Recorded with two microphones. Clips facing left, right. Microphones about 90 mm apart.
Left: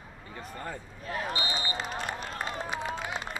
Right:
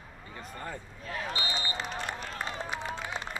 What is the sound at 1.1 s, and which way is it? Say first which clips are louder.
Basketball bounce: left 3 dB; 35° left (ahead or behind).